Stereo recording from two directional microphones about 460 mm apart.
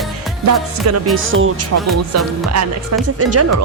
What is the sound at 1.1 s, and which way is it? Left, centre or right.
Speech, right.